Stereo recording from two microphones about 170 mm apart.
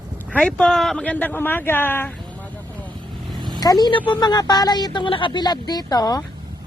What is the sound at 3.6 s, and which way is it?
A woman's voice, 25° left (ahead or behind).